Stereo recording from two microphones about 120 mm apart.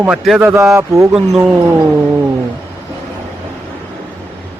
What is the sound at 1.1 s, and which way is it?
Speech, 15° right (ahead or behind).